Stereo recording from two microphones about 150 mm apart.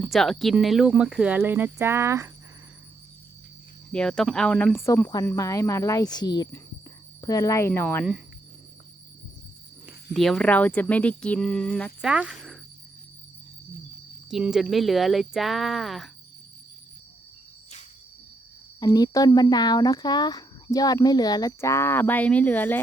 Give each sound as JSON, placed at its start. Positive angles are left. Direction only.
{"t": 0.0, "sound": "speech", "side_deg": 0}
{"t": 3.9, "sound": "speech", "side_deg": 5}
{"t": 9.8, "sound": "speech", "side_deg": 0}
{"t": 12.0, "sound": "speech", "side_deg": -5}
{"t": 14.3, "sound": "speech", "side_deg": -5}
{"t": 18.8, "sound": "speech", "side_deg": 25}